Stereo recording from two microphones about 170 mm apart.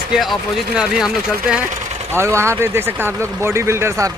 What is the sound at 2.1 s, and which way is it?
Speech, 15° right (ahead or behind).